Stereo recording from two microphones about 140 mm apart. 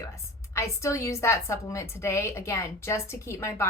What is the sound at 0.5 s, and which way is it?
A woman's voice, 20° left (ahead or behind).